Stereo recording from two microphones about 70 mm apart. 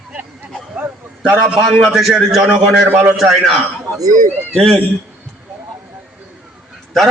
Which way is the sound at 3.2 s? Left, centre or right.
Centre.